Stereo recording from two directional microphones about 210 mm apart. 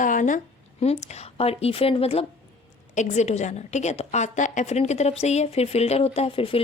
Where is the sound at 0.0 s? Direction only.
40° left (ahead or behind).